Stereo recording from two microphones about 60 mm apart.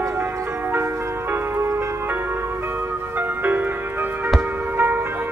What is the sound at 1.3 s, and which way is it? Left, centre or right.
Music, right.